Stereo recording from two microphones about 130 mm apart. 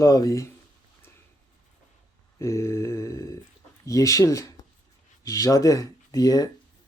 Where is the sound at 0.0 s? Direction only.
25° left (ahead or behind).